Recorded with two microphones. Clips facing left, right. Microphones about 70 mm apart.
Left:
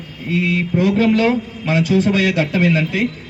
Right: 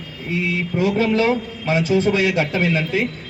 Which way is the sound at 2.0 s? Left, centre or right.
Right.